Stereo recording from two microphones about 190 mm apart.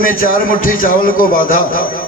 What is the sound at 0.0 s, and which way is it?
A man's voice, 45° left (ahead or behind).